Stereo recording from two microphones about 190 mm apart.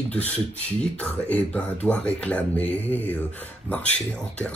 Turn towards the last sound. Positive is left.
turn(degrees=5)  # may be behind; listen again after turning